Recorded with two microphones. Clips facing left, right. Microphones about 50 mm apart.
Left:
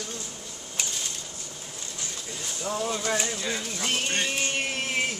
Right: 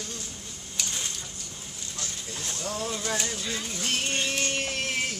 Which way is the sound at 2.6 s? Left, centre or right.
Centre.